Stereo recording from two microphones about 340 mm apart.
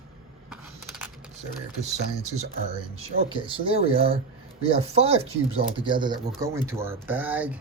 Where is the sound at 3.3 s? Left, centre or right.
Centre.